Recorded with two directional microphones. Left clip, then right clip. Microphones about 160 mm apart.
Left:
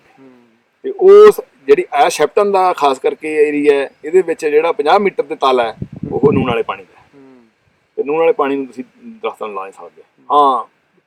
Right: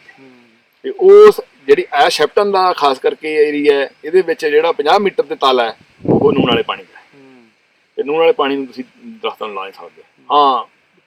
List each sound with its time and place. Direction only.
0.9 s a man's voice: 10° left (ahead or behind)
7.9 s a man's voice: 15° left (ahead or behind)